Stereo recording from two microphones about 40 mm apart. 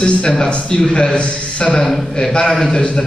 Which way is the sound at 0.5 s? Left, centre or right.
Left.